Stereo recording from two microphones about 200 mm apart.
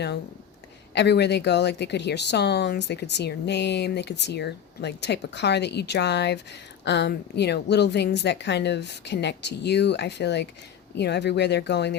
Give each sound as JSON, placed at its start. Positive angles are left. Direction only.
{"t": 0.9, "sound": "speech", "side_deg": 55}